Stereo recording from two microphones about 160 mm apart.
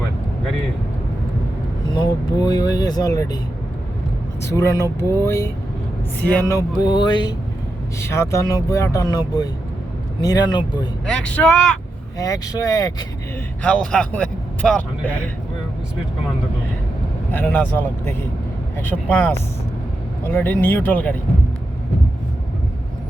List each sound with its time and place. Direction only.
2.4 s speech: 25° left (ahead or behind)
4.4 s speech: 20° left (ahead or behind)
8.0 s speech: 15° left (ahead or behind)
11.1 s speech: 5° left (ahead or behind)
12.1 s speech: 20° left (ahead or behind)
13.6 s speech: 5° left (ahead or behind)
17.3 s speech: 10° left (ahead or behind)
18.8 s speech: 10° left (ahead or behind)